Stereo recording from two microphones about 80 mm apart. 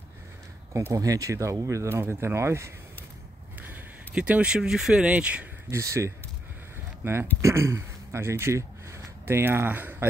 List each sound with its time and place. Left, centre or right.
0.7 s speech: right
4.1 s speech: centre
5.1 s speech: centre
5.7 s speech: right
7.0 s speech: right
7.4 s speech: right